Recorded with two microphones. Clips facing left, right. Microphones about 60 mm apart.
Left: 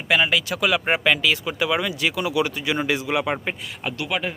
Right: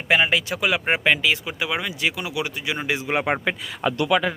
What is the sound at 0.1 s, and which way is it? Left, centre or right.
Speech, right.